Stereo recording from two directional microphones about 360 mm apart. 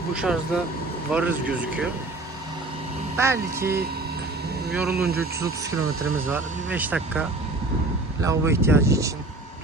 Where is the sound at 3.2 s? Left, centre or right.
Centre.